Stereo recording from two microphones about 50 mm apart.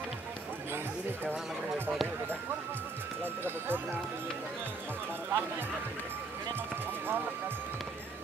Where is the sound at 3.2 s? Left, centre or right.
Right.